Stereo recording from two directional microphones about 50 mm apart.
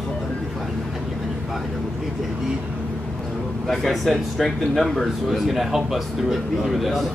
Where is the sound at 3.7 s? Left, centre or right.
Centre.